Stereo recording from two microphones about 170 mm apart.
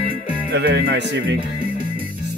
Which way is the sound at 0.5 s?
90° right.